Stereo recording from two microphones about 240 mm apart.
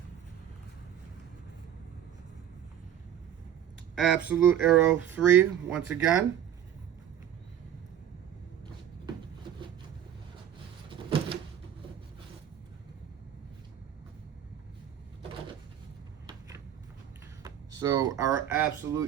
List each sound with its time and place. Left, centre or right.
3.9 s speech: centre
10.8 s a sound: right
17.4 s speech: centre